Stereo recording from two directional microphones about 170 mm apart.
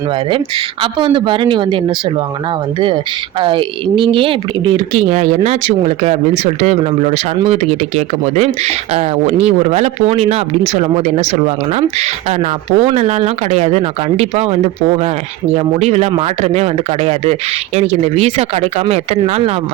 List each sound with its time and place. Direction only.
0.3 s speech: 30° right (ahead or behind)
3.4 s speech: 30° right (ahead or behind)
5.1 s speech: 40° right (ahead or behind)